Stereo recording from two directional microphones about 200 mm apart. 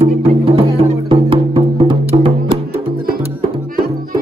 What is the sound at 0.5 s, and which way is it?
Music, 30° right (ahead or behind).